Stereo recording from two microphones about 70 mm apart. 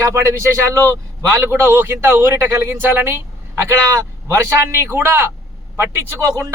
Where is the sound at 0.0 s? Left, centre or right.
Right.